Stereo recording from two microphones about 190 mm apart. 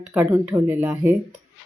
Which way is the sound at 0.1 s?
10° right (ahead or behind).